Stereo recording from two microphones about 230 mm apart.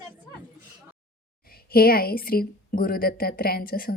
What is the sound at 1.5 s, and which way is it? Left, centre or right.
A woman's voice, left.